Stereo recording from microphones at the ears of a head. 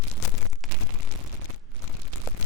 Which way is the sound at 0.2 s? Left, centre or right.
Left.